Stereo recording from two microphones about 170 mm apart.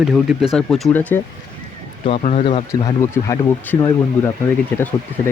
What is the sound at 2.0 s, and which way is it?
Speech, 40° left (ahead or behind).